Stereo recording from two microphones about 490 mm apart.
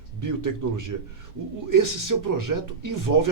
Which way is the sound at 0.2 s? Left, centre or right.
Right.